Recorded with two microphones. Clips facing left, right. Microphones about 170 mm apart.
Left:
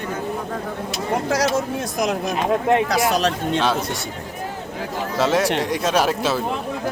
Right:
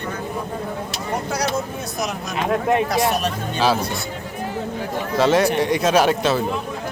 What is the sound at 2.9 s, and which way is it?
Speech, 90° left.